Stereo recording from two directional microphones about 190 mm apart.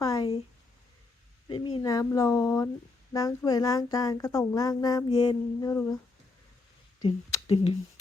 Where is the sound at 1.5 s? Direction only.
25° left (ahead or behind).